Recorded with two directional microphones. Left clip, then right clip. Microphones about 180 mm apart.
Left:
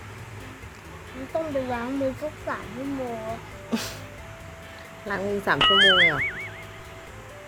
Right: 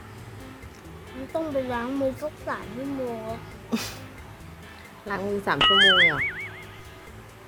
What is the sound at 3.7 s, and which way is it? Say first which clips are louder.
Speech: even; 5° right (ahead or behind).